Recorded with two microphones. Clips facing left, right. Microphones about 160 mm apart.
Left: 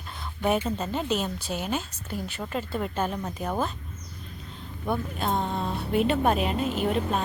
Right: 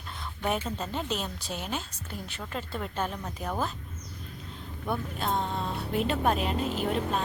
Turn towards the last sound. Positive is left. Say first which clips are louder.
# left 3 dB
turn(degrees=5)  # may be behind; listen again after turning